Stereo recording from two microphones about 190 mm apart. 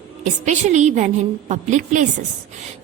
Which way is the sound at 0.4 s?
40° right (ahead or behind).